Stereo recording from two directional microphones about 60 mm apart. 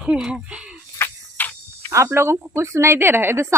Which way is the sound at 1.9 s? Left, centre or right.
Right.